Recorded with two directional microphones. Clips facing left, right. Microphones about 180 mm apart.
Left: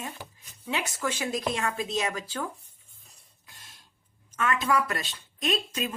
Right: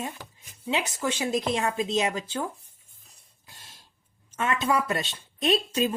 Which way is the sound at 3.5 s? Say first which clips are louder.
Right 2 dB; 30° right (ahead or behind).